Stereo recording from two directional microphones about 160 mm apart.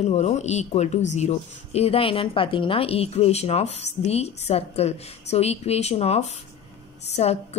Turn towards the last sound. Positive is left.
turn(degrees=40)  # may be behind; listen again after turning